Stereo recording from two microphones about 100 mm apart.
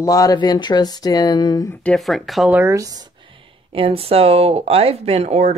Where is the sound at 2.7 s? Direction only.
35° right (ahead or behind).